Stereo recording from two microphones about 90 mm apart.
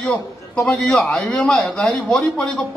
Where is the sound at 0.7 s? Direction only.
5° left (ahead or behind).